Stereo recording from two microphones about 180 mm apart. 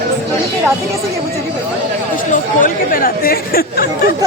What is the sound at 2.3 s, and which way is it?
Speech, 50° left (ahead or behind).